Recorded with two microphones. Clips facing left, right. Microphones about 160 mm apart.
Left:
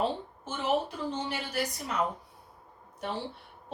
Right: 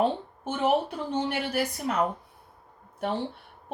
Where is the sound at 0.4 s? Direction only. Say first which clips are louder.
Right 5 dB; 60° right (ahead or behind).